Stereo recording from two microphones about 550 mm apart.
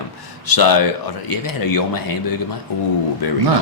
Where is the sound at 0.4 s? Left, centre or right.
Left.